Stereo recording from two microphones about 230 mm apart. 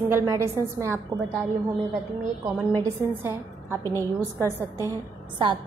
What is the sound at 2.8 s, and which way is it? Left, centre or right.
A woman's voice, centre.